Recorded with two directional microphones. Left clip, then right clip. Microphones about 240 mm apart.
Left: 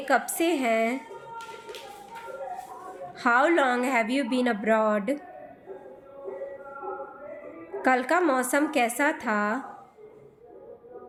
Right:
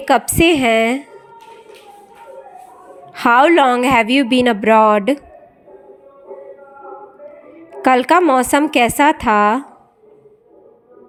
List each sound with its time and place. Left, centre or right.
0.0 s a woman's voice: right
3.1 s a woman's voice: right
7.8 s a woman's voice: right